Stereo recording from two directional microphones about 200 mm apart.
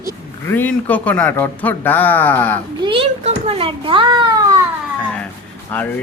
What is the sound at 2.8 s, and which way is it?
A child's voice, 25° right (ahead or behind).